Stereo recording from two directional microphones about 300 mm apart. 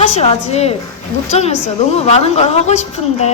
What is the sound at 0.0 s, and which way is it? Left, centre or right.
A woman's voice, left.